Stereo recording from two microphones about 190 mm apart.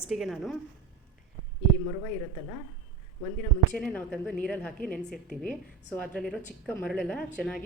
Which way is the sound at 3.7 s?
5° left (ahead or behind).